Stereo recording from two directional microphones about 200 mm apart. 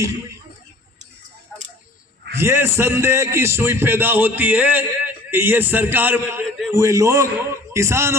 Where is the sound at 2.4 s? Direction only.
10° right (ahead or behind).